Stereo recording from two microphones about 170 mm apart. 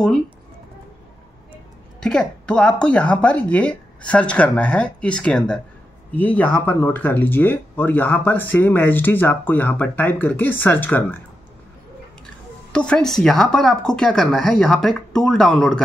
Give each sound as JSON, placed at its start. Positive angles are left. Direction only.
{"t": 2.0, "sound": "speech", "side_deg": 5}
{"t": 12.7, "sound": "speech", "side_deg": 5}